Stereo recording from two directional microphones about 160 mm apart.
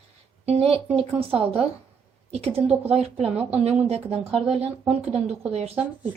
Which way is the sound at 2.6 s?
5° right (ahead or behind).